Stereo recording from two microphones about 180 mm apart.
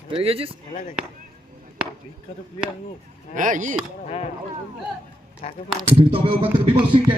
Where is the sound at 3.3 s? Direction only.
45° right (ahead or behind).